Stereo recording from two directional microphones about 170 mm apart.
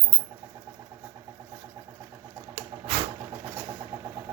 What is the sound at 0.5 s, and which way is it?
Vehicle, 20° right (ahead or behind).